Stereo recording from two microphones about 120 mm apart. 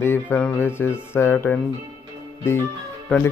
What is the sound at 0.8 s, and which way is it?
Speech, 20° left (ahead or behind).